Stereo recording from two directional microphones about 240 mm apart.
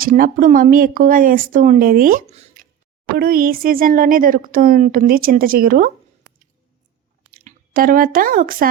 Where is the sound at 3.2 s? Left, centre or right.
Right.